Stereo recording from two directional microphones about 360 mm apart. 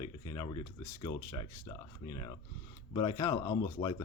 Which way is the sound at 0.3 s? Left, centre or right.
Centre.